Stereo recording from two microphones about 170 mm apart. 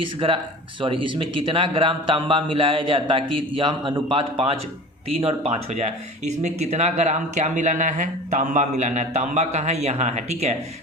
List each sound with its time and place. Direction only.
0.2 s a man's voice: 35° right (ahead or behind)